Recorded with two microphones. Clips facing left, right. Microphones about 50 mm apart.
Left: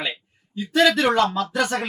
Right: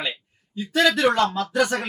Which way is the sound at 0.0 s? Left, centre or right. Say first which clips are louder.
Left 1 dB; centre.